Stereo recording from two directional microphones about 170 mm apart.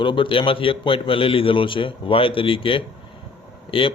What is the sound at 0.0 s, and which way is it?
A man's voice, 30° left (ahead or behind).